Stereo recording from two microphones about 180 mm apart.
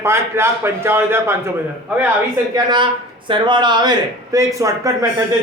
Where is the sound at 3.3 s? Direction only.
25° right (ahead or behind).